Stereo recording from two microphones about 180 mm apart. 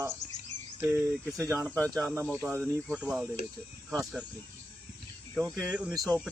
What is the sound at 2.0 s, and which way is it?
Speech, 5° right (ahead or behind).